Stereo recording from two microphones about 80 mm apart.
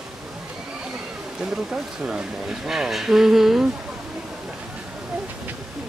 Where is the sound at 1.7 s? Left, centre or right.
Centre.